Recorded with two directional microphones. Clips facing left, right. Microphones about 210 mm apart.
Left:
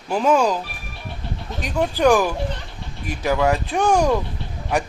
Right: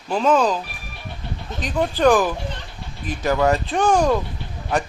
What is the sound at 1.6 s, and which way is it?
Speech, 10° left (ahead or behind).